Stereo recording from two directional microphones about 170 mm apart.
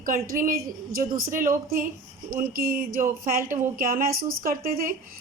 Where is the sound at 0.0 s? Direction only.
55° right (ahead or behind).